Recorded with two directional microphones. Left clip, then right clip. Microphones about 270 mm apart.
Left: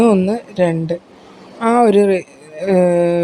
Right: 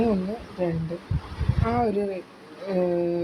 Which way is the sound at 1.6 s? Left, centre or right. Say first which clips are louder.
Left 14 dB; left.